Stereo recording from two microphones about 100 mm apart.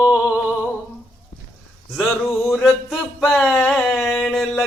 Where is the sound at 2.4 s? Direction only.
Centre (ahead or behind).